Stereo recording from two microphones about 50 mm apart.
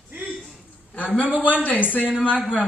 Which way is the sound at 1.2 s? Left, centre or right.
Left.